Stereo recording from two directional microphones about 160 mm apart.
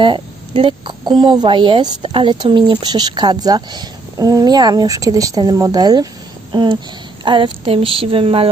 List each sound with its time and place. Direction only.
0.0 s speech: 30° right (ahead or behind)